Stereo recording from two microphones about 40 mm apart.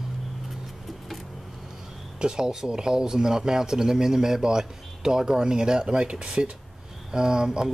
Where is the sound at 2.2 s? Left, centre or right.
Centre.